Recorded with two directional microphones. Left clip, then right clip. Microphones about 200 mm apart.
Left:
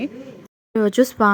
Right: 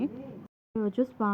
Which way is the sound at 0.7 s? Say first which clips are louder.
Left 13 dB; 35° left (ahead or behind).